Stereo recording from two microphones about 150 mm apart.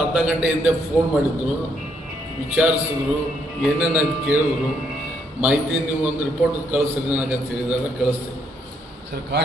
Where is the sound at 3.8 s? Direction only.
10° right (ahead or behind).